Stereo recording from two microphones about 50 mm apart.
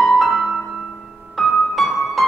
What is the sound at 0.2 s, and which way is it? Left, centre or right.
Music, centre.